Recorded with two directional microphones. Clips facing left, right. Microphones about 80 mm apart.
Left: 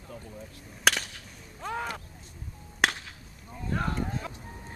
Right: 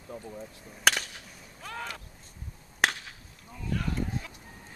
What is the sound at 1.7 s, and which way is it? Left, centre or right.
Speech, left.